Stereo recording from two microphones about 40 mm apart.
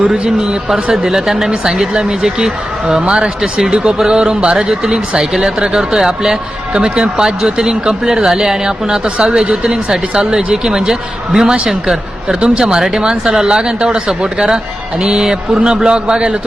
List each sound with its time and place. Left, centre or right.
0.1 s speech: centre
4.5 s speech: centre
12.4 s speech: right